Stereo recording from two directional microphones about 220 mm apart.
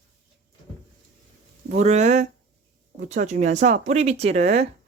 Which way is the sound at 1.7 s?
30° right (ahead or behind).